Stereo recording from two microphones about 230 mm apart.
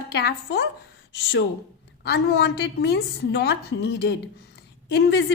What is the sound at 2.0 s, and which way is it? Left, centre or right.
A woman's voice, left.